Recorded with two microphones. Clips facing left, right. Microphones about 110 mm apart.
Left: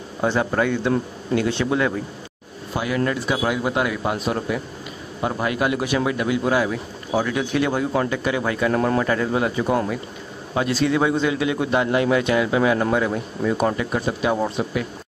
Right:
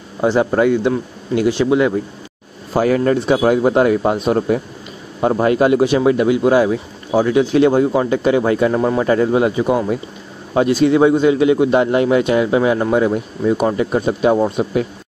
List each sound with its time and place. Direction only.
0.2 s a man's voice: 20° right (ahead or behind)
2.7 s speech: 40° right (ahead or behind)
8.7 s a man's voice: 10° right (ahead or behind)
9.0 s speech: 25° right (ahead or behind)